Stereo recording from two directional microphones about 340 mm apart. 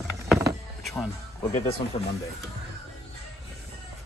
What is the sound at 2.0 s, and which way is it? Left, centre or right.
Speech, centre.